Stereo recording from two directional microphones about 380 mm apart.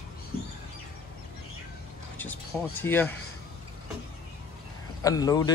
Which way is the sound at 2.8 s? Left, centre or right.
Centre.